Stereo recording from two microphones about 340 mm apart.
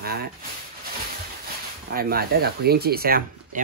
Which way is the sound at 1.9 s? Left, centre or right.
Right.